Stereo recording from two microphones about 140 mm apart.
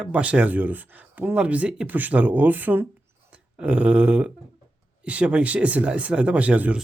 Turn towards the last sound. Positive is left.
turn(degrees=-10)  # may be behind; listen again after turning